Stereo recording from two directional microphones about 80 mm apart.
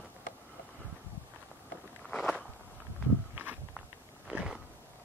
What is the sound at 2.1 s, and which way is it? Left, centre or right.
Walk, centre.